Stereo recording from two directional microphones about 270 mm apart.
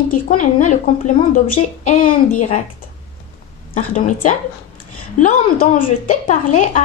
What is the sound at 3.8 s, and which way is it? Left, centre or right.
A woman's voice, left.